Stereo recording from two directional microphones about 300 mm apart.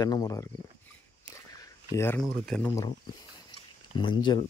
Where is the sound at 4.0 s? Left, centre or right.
Centre.